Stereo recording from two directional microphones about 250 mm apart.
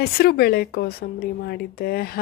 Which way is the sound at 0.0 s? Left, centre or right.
Left.